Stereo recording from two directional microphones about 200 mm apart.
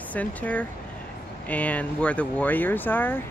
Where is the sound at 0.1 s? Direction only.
5° left (ahead or behind).